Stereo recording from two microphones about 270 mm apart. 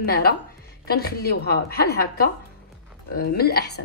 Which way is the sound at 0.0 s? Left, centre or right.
Left.